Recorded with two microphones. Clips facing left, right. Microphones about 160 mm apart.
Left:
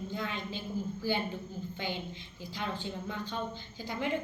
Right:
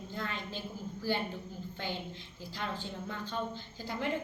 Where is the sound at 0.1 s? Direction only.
Centre (ahead or behind).